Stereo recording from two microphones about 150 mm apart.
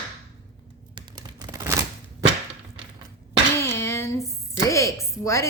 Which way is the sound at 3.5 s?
15° left (ahead or behind).